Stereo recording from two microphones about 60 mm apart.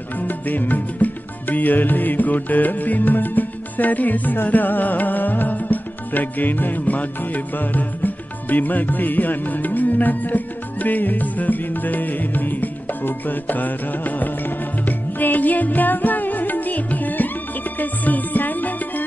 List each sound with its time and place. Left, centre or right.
0.3 s music: left